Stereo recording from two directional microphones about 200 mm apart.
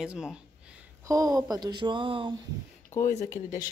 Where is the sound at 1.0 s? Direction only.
15° right (ahead or behind).